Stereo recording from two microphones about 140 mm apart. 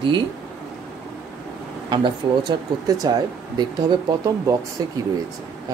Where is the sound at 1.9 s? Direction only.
35° right (ahead or behind).